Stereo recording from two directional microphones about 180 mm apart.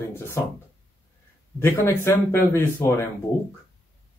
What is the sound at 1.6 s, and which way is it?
A man's voice, 15° left (ahead or behind).